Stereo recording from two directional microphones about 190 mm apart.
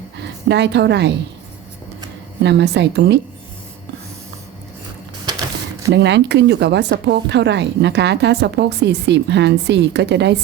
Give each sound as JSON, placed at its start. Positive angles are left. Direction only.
{"t": 0.2, "sound": "a woman's voice", "side_deg": -65}
{"t": 2.4, "sound": "speech", "side_deg": -65}
{"t": 5.9, "sound": "speech", "side_deg": -65}